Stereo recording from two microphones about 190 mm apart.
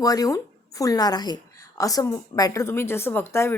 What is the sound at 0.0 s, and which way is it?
A woman's voice, 20° left (ahead or behind).